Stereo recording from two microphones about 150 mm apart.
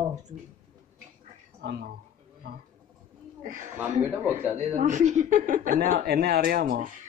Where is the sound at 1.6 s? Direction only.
90° right.